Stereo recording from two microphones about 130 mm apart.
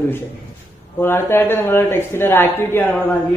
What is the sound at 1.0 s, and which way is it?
A man's voice, 20° left (ahead or behind).